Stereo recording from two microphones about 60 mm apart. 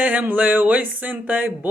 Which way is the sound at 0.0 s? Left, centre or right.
Right.